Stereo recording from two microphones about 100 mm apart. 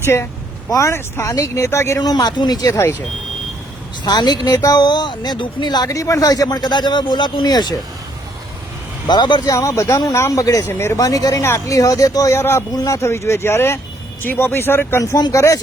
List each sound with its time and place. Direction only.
0.0 s speech: 25° left (ahead or behind)
2.0 s speech: 40° left (ahead or behind)
4.0 s speech: 45° left (ahead or behind)
9.0 s speech: 45° left (ahead or behind)
9.5 s speech: 30° left (ahead or behind)
10.7 s speech: 25° left (ahead or behind)
10.9 s speech: 35° left (ahead or behind)